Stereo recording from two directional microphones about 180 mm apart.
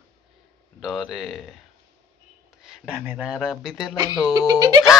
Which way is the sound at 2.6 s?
5° right (ahead or behind).